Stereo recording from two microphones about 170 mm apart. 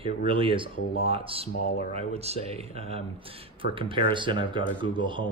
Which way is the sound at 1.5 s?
60° left (ahead or behind).